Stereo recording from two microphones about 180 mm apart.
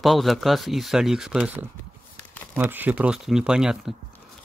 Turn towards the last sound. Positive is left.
turn(degrees=-5)  # may be behind; listen again after turning